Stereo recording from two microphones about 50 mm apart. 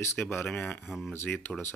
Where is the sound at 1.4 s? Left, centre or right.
Left.